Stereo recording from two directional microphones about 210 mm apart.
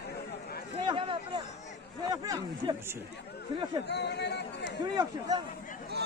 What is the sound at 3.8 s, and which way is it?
Speech, 55° left (ahead or behind).